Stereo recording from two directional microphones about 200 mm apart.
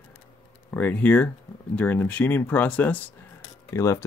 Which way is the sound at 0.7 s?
5° left (ahead or behind).